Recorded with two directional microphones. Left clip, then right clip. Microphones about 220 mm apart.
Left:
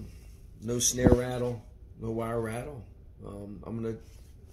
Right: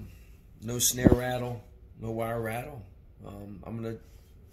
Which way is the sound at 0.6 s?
20° right (ahead or behind).